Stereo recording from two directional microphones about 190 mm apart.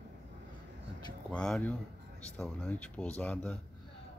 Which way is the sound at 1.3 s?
5° left (ahead or behind).